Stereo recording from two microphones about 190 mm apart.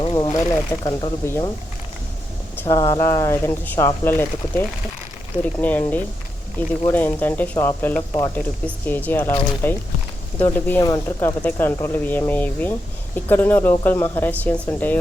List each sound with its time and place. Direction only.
0.0 s a sound: 25° left (ahead or behind)
0.7 s speech: 15° left (ahead or behind)
2.6 s speech: 15° left (ahead or behind)
5.6 s speech: 10° left (ahead or behind)